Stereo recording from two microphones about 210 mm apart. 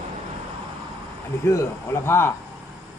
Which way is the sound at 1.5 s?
15° left (ahead or behind).